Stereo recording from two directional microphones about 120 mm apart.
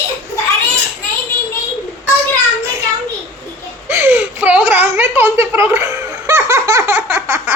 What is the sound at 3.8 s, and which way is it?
Speech, 20° right (ahead or behind).